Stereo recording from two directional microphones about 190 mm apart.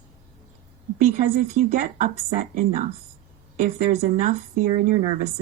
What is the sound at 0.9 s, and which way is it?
A woman's voice, 40° right (ahead or behind).